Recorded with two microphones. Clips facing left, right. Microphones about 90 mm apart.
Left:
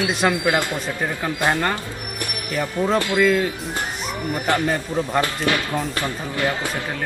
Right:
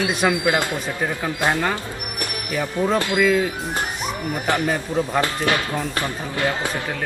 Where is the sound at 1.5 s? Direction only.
5° right (ahead or behind).